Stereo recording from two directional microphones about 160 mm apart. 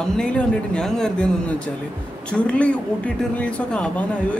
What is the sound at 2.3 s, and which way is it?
Speech, 5° left (ahead or behind).